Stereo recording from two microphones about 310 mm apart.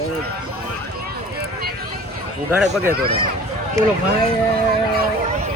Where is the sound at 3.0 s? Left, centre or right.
Centre.